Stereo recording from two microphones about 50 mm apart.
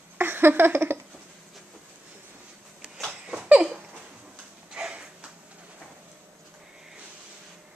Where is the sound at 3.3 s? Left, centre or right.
Right.